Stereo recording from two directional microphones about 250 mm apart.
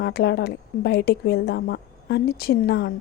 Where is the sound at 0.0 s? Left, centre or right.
Left.